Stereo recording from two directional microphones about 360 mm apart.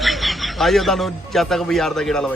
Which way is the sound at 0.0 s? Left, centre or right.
Centre.